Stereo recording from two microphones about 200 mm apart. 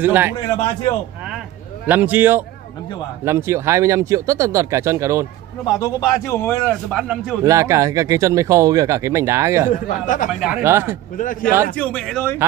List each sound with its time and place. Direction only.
0.0 s speech: 10° right (ahead or behind)
1.9 s speech: 10° right (ahead or behind)
5.8 s a man's voice: 15° left (ahead or behind)
7.0 s speech: 5° right (ahead or behind)
7.4 s speech: 15° right (ahead or behind)
9.7 s speech: 40° left (ahead or behind)
10.6 s speech: 10° right (ahead or behind)
11.1 s speech: 40° left (ahead or behind)
11.7 s speech: 5° left (ahead or behind)